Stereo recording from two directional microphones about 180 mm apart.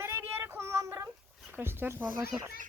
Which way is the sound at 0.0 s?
10° right (ahead or behind).